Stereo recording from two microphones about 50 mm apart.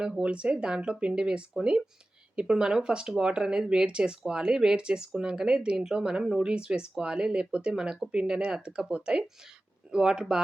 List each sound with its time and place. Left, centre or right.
0.2 s speech: right
9.9 s speech: centre